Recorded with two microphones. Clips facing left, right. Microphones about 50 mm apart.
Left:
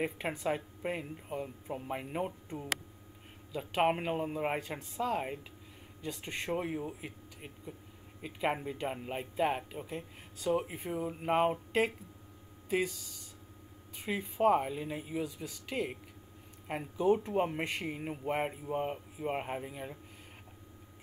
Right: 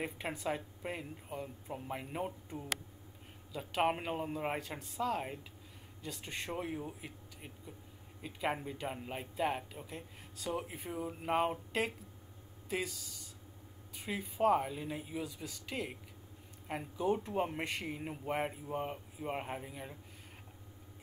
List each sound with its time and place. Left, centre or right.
0.0 s speech: centre